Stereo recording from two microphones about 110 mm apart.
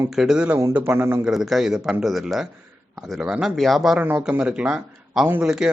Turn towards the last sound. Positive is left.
turn(degrees=-5)  # may be behind; listen again after turning